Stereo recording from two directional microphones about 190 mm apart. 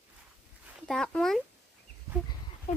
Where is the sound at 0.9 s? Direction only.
5° left (ahead or behind).